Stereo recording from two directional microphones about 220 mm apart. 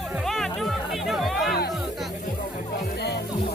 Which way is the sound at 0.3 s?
Centre (ahead or behind).